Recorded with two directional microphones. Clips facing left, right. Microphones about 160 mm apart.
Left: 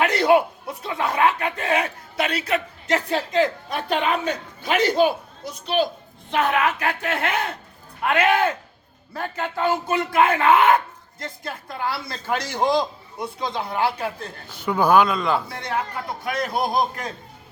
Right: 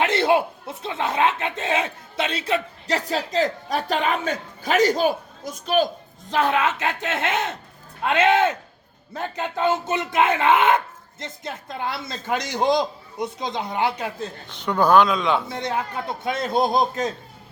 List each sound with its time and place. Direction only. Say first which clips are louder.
0.0 s speech: left 2 dB; 25° right (ahead or behind); by 5.9 s 45° right (ahead or behind)
6.3 s speech: even; 30° right (ahead or behind)
14.5 s speech: even; 5° left (ahead or behind)
15.4 s speech: right 1 dB; 20° right (ahead or behind)